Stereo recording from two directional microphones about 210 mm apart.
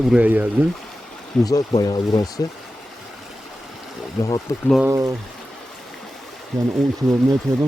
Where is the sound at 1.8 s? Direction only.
15° left (ahead or behind).